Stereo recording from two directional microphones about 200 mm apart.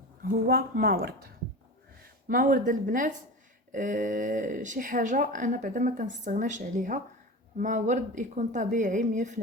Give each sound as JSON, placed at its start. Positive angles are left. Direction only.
{"t": 0.2, "sound": "a woman's voice", "side_deg": -50}
{"t": 2.2, "sound": "speech", "side_deg": -45}